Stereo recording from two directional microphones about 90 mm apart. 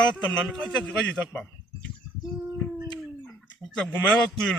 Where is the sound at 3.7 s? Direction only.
10° left (ahead or behind).